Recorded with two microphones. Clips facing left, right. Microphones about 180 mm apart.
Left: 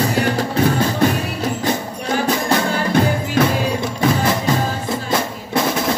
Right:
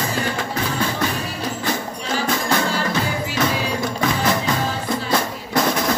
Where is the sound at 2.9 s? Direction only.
50° left (ahead or behind).